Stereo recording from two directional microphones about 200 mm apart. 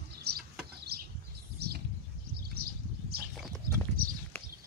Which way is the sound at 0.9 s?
50° right (ahead or behind).